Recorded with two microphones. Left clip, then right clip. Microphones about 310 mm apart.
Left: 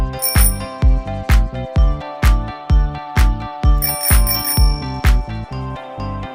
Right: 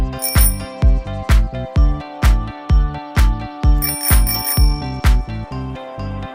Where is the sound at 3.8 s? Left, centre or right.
Centre.